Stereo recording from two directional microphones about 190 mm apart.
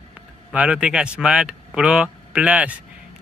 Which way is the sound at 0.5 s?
5° right (ahead or behind).